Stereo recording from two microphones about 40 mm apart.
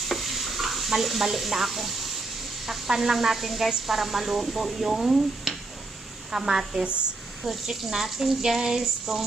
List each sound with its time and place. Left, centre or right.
0.1 s stir: centre
2.6 s speech: centre
6.8 s a woman's voice: right
7.4 s speech: centre